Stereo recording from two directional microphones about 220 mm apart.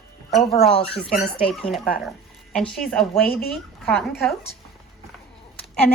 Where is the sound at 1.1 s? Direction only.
5° left (ahead or behind).